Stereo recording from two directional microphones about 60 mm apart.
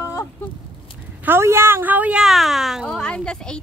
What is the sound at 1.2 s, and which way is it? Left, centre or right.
Speech, right.